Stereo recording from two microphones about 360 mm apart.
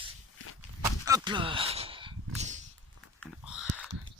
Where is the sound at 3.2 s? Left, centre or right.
Centre.